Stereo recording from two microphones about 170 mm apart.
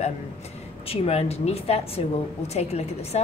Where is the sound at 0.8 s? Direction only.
35° left (ahead or behind).